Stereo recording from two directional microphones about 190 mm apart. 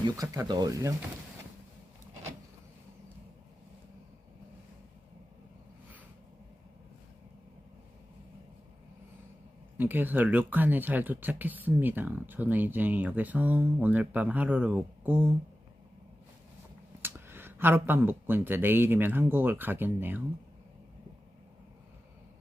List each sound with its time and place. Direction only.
0.0 s speech: 20° right (ahead or behind)
9.7 s speech: 10° right (ahead or behind)
17.0 s speech: 10° right (ahead or behind)